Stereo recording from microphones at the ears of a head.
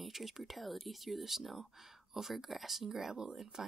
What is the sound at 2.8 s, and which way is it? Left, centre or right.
Speech, right.